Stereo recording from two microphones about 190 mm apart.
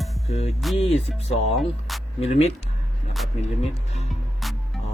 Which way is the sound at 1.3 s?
35° left (ahead or behind).